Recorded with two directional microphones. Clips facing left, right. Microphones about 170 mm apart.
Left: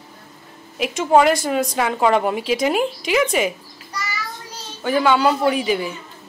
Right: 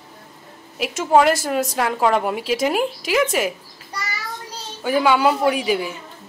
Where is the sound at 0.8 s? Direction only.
5° right (ahead or behind).